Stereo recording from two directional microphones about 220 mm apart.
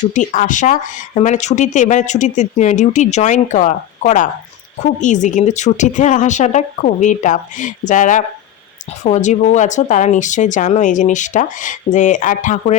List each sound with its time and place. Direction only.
0.0 s speech: 35° left (ahead or behind)